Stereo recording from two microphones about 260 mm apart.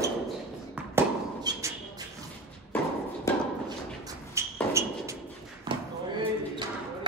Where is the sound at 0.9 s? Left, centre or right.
Centre.